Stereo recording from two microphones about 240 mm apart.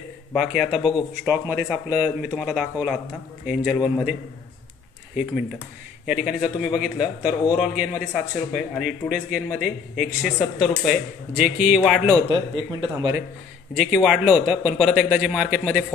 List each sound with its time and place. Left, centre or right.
0.3 s speech: centre
6.0 s speech: centre
12.3 s speech: centre
13.7 s speech: centre